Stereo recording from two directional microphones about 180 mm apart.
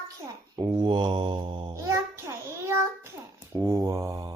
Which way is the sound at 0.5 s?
20° right (ahead or behind).